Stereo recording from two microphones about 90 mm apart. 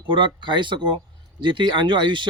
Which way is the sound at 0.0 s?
65° right (ahead or behind).